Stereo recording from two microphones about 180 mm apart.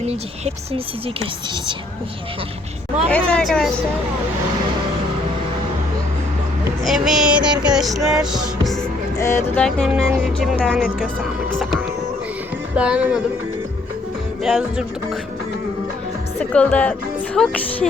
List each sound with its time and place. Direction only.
0.0 s speech: 35° right (ahead or behind)
3.1 s music: 5° left (ahead or behind)
6.8 s music: centre (ahead or behind)
9.1 s speech: 15° left (ahead or behind)
9.6 s music: centre (ahead or behind)
12.7 s music: 5° right (ahead or behind)
14.4 s music: centre (ahead or behind)
16.4 s speech: 5° left (ahead or behind)
17.3 s music: 5° left (ahead or behind)